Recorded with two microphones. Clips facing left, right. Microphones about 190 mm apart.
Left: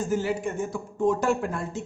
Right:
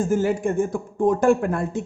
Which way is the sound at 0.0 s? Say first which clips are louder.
Right 5 dB; 50° right (ahead or behind).